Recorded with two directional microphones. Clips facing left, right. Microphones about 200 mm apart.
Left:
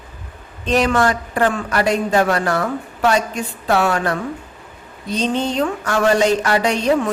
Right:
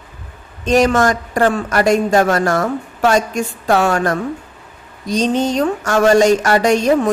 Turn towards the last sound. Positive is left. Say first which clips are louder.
# right 4 dB
turn(degrees=-45)  # may be behind; listen again after turning